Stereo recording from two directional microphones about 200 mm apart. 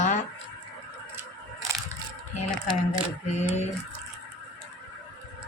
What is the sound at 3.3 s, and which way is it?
Speech, 35° left (ahead or behind).